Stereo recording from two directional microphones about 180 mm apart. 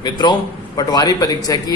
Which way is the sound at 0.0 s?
20° left (ahead or behind).